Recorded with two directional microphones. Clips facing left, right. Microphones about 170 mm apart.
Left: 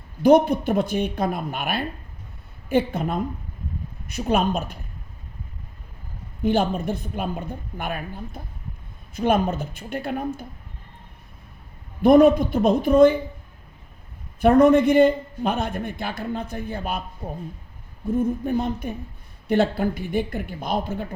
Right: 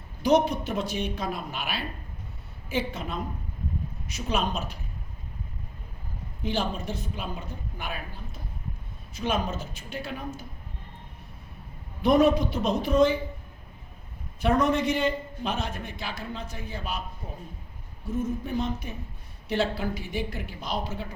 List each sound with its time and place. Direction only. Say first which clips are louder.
0.2 s a man's voice: left 7 dB; 55° left (ahead or behind)
6.4 s a man's voice: left 8 dB; 55° left (ahead or behind)
12.0 s speech: left 7 dB; 55° left (ahead or behind)
14.4 s a man's voice: left 9 dB; 55° left (ahead or behind)
18.1 s a man's voice: left 7 dB; 55° left (ahead or behind)